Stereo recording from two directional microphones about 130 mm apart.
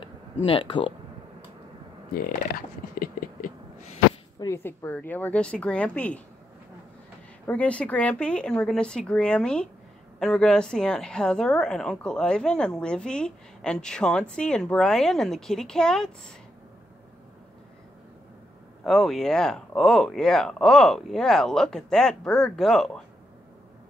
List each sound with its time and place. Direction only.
0.4 s speech: 45° left (ahead or behind)
2.5 s a sound: 90° left
4.6 s speech: 15° left (ahead or behind)
7.4 s a woman's voice: 10° left (ahead or behind)
18.9 s a woman's voice: 5° left (ahead or behind)